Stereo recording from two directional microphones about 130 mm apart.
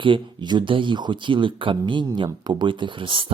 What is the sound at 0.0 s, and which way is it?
Speech, 40° right (ahead or behind).